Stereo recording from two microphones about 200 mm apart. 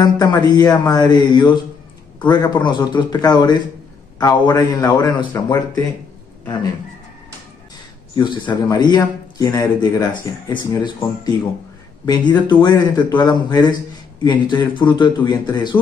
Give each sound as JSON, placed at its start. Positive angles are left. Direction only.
{"t": 0.0, "sound": "a man's voice", "side_deg": 20}
{"t": 8.1, "sound": "a man's voice", "side_deg": 20}